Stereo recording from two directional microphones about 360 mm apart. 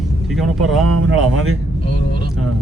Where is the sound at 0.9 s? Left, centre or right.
Right.